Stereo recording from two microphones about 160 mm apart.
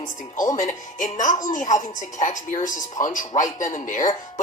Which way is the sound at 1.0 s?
50° left (ahead or behind).